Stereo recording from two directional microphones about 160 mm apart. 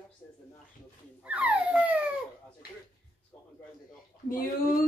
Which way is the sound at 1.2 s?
10° right (ahead or behind).